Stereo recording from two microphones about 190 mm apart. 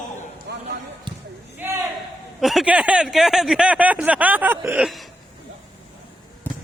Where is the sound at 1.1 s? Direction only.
25° right (ahead or behind).